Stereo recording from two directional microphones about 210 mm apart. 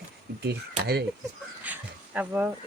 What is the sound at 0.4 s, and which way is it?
Speech, 50° right (ahead or behind).